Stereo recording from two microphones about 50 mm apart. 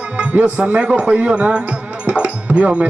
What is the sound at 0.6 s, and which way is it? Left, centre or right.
Speech, right.